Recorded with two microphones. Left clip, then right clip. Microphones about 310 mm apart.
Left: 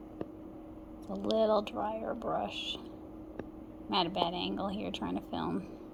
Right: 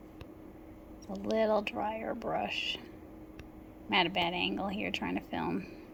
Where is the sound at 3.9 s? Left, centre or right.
Right.